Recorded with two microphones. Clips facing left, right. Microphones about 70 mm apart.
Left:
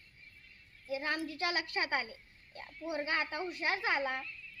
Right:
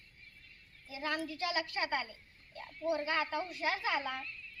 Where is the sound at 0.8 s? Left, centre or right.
Left.